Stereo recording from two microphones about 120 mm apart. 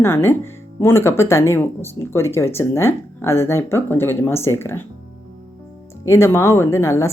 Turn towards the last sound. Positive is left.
turn(degrees=20)  # may be behind; listen again after turning